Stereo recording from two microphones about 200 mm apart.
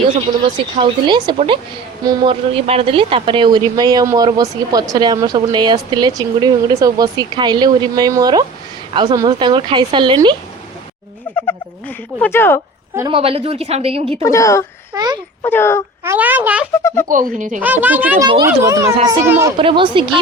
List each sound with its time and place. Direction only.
0.4 s speech: 25° right (ahead or behind)
12.2 s a woman's voice: 10° left (ahead or behind)
13.1 s speech: 30° right (ahead or behind)
14.2 s a woman's voice: 15° left (ahead or behind)
14.9 s speech: 20° right (ahead or behind)
15.4 s a woman's voice: 10° left (ahead or behind)
16.0 s a woman's voice: 10° right (ahead or behind)
16.8 s a woman's voice: 10° left (ahead or behind)
17.3 s speech: 40° right (ahead or behind)
17.6 s a woman's voice: 10° right (ahead or behind)
19.5 s speech: 25° right (ahead or behind)